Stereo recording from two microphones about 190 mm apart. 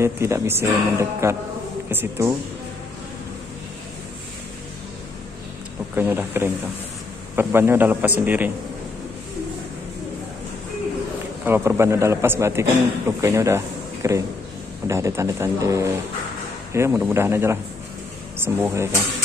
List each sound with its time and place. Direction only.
0.0 s a man's voice: 15° right (ahead or behind)
5.9 s a man's voice: 10° right (ahead or behind)
11.4 s a man's voice: 10° right (ahead or behind)